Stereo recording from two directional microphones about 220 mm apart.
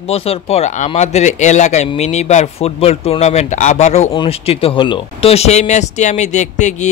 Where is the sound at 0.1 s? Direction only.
25° left (ahead or behind).